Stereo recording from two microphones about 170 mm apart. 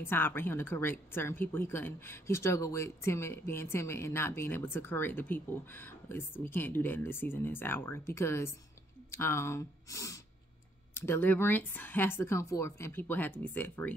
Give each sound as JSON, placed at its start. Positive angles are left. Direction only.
{"t": 0.0, "sound": "a woman's voice", "side_deg": 15}